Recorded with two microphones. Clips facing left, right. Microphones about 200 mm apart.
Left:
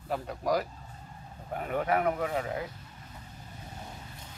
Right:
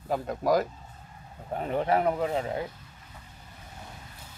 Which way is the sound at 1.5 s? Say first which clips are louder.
Right 3 dB; 30° right (ahead or behind).